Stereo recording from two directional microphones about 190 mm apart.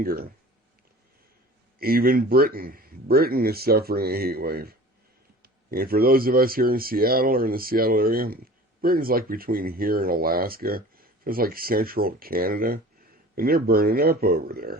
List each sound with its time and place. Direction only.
0.0 s speech: 50° right (ahead or behind)
1.8 s speech: 50° right (ahead or behind)